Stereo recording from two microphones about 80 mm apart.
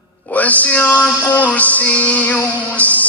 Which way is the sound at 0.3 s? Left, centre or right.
Centre.